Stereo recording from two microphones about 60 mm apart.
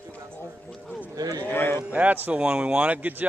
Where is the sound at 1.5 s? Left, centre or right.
Left.